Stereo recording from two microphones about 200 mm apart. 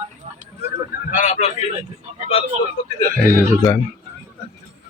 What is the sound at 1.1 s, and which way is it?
Speech, 35° left (ahead or behind).